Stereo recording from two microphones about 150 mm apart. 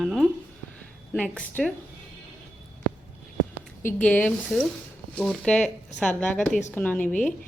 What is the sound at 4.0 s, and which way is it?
A woman's voice, 10° left (ahead or behind).